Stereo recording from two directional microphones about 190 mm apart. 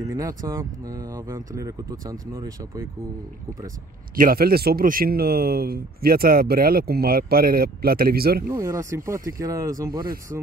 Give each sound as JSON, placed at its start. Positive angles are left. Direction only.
{"t": 0.0, "sound": "speech", "side_deg": -20}
{"t": 4.2, "sound": "speech", "side_deg": -50}
{"t": 8.5, "sound": "speech", "side_deg": -15}